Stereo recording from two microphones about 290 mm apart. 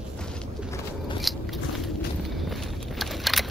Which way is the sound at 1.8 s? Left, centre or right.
Centre.